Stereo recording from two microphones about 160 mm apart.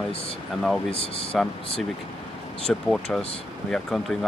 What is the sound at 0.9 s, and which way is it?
Speech, 35° left (ahead or behind).